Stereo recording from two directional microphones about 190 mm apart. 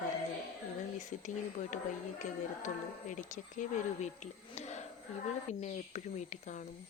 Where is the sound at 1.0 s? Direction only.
40° left (ahead or behind).